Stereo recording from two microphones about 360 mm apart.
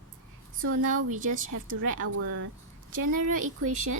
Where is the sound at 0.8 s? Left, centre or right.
Right.